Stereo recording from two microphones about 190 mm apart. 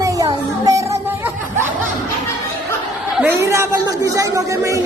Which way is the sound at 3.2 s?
10° right (ahead or behind).